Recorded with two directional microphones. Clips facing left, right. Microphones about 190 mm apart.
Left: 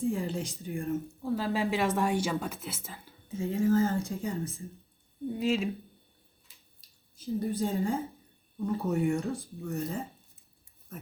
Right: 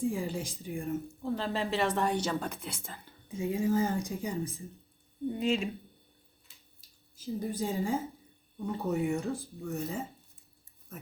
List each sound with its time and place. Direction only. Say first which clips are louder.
0.1 s speech: left 2 dB; 10° right (ahead or behind)
3.3 s speech: left 3 dB; 15° right (ahead or behind)
5.3 s speech: left 1 dB; centre (ahead or behind)
7.2 s speech: left 3 dB; 10° right (ahead or behind)